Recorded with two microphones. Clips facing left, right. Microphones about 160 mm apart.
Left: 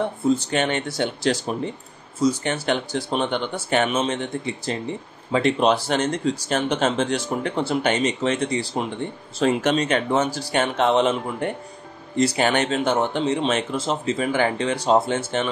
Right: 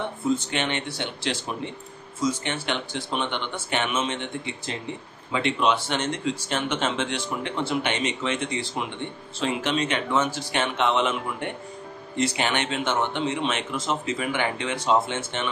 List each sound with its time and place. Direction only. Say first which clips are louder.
0.0 s speech: left 4 dB; 35° left (ahead or behind)